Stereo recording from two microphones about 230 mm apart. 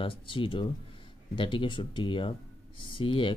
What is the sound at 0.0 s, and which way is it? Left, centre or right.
Speech, left.